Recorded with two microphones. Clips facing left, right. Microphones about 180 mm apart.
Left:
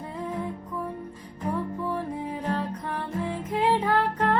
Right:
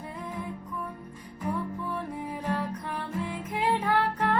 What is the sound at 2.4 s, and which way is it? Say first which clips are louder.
Music: even; 10° right (ahead or behind).